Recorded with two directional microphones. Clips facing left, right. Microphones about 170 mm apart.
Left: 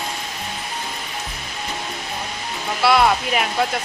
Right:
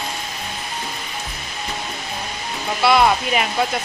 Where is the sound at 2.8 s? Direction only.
Centre (ahead or behind).